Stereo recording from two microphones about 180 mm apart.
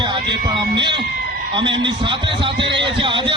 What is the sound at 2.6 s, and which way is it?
Speech, 75° right (ahead or behind).